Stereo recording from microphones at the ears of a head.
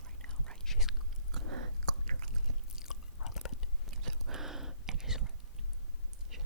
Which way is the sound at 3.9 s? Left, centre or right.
Right.